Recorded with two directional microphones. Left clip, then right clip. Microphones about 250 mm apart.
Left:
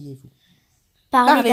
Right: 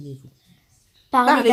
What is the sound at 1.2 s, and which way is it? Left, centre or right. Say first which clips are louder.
Speech: left 2 dB; left.